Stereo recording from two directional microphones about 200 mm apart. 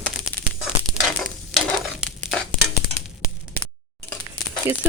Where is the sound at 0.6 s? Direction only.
Centre (ahead or behind).